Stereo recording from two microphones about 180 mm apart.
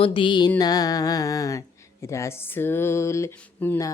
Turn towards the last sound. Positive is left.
turn(degrees=15)  # may be behind; listen again after turning